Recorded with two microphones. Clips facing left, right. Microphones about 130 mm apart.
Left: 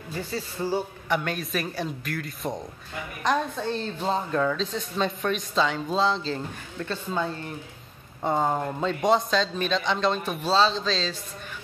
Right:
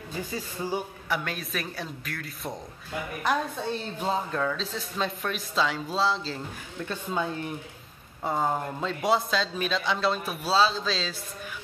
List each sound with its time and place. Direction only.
0.3 s a man's voice: 15° right (ahead or behind)
1.0 s a woman's voice: centre (ahead or behind)